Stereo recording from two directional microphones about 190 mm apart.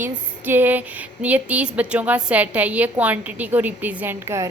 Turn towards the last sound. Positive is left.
turn(degrees=-15)  # may be behind; listen again after turning